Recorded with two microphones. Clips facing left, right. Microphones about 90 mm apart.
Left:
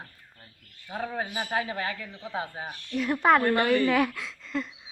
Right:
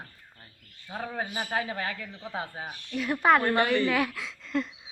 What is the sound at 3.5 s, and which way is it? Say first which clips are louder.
Speech: left 1 dB; 25° right (ahead or behind).